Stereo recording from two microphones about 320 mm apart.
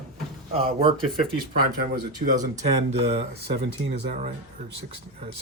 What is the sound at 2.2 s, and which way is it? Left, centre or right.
Speech, right.